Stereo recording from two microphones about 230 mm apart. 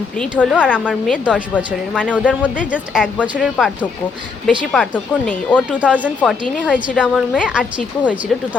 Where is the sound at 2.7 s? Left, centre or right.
Centre.